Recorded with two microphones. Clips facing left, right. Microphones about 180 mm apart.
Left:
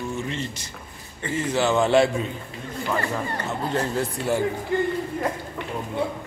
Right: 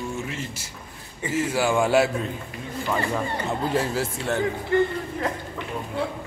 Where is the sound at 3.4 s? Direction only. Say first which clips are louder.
Right 1 dB; 5° right (ahead or behind).